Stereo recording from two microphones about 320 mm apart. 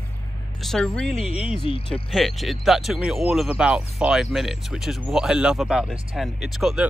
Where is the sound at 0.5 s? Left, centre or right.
Centre.